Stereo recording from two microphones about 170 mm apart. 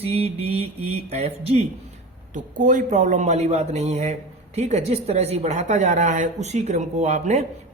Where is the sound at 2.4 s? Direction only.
50° right (ahead or behind).